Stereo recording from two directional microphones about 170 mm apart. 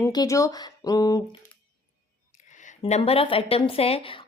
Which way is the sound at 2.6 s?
40° left (ahead or behind).